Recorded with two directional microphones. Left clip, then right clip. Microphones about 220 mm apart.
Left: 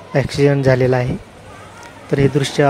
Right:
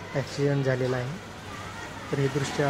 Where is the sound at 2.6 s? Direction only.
40° left (ahead or behind).